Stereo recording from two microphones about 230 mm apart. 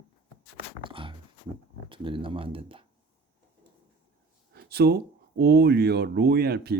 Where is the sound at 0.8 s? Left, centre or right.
Right.